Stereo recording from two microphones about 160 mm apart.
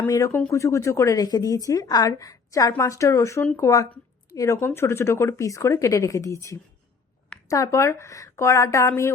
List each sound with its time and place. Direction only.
0.1 s speech: 20° left (ahead or behind)